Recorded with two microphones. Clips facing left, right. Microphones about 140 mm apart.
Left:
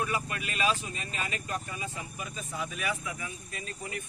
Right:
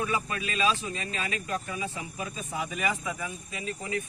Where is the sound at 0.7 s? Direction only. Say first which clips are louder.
Right 1 dB; 90° right.